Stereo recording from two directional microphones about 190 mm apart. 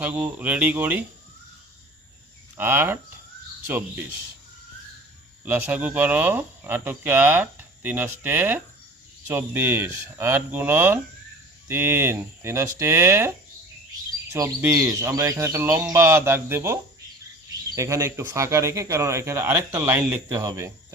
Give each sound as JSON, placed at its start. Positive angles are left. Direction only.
{"t": 0.0, "sound": "speech", "side_deg": -10}
{"t": 2.6, "sound": "speech", "side_deg": -10}
{"t": 5.5, "sound": "speech", "side_deg": -10}
{"t": 14.3, "sound": "speech", "side_deg": -15}
{"t": 17.7, "sound": "speech", "side_deg": -15}